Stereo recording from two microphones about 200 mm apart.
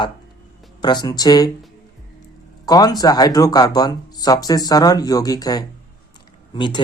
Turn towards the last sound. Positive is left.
turn(degrees=20)  # may be behind; listen again after turning